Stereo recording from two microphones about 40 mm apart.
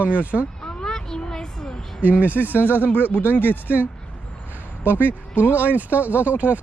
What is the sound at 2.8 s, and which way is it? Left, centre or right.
Speech, left.